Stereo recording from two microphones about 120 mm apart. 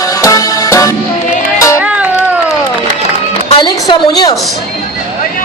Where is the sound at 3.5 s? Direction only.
40° left (ahead or behind).